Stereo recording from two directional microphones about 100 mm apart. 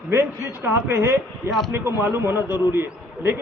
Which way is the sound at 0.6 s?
25° right (ahead or behind).